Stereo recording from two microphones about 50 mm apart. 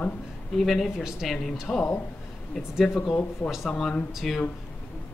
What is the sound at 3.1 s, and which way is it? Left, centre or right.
Speech, left.